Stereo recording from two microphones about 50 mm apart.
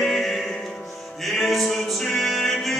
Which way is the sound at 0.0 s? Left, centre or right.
Centre.